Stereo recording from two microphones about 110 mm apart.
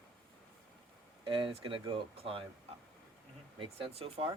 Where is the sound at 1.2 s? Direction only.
50° right (ahead or behind).